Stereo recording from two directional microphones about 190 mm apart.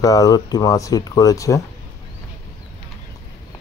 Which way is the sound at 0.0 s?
20° left (ahead or behind).